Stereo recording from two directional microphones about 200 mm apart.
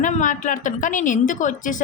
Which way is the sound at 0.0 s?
40° left (ahead or behind).